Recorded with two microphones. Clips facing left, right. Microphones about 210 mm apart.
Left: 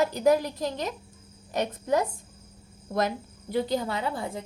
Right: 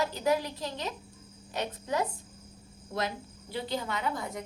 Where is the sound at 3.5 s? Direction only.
35° left (ahead or behind).